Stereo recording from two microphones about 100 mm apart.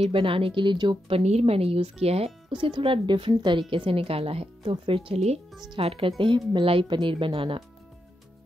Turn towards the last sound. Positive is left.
turn(degrees=-65)  # may be behind; listen again after turning